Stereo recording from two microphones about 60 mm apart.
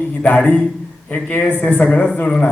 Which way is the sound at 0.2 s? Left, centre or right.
Left.